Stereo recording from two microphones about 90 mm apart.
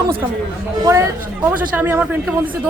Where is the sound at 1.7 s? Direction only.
20° right (ahead or behind).